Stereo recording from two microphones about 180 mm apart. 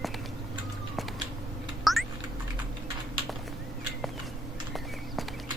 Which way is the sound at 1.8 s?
Centre (ahead or behind).